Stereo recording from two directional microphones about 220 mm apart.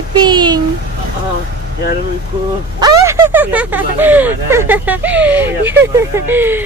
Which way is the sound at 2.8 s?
15° right (ahead or behind).